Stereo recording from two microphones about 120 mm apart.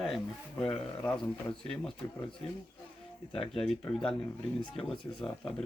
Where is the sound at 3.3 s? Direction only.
55° left (ahead or behind).